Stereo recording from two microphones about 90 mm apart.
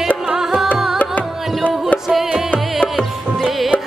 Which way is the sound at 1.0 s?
15° left (ahead or behind).